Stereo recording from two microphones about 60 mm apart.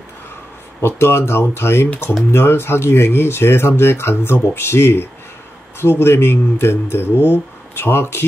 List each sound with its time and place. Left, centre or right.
0.7 s speech: left